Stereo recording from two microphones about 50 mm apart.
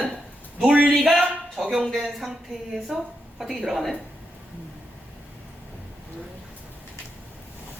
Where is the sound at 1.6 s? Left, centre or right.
Centre.